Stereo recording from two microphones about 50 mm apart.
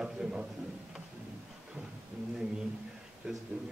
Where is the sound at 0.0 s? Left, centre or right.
Centre.